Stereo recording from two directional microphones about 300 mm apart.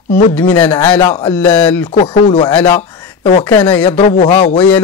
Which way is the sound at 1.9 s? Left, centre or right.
Centre.